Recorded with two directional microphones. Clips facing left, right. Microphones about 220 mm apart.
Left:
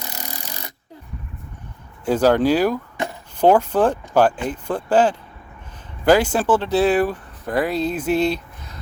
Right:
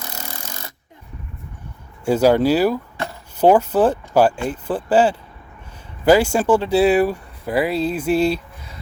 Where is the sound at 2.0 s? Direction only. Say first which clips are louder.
Right 1 dB; 10° right (ahead or behind).